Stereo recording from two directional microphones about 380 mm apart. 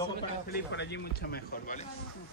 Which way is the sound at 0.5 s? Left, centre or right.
Left.